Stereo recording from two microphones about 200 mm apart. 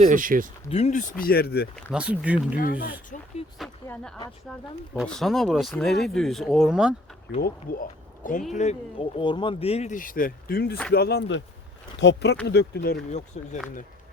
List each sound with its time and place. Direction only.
0.0 s speech: 40° right (ahead or behind)
0.7 s speech: 35° left (ahead or behind); by 1.6 s 50° left (ahead or behind)
1.7 s speech: 5° right (ahead or behind)
2.6 s speech: 50° left (ahead or behind)
3.8 s speech: 5° left (ahead or behind)
7.4 s speech: 45° left (ahead or behind)
8.5 s speech: 30° left (ahead or behind); by 13.1 s 50° left (ahead or behind)
13.1 s speech: 35° left (ahead or behind)